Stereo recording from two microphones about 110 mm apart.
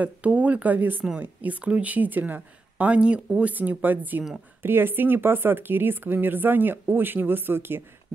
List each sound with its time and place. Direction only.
0.0 s speech: 15° right (ahead or behind)